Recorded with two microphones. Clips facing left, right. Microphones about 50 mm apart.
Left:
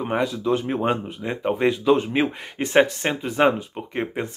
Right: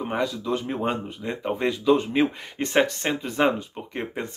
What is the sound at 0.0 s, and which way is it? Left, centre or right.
Speech, left.